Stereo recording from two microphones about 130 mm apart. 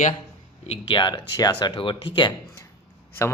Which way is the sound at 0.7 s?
40° left (ahead or behind).